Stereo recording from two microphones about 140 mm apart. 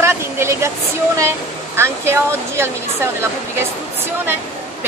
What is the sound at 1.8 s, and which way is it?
A woman's voice, 20° right (ahead or behind).